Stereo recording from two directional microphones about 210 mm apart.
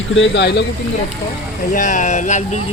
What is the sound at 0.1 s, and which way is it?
Speech, 60° left (ahead or behind).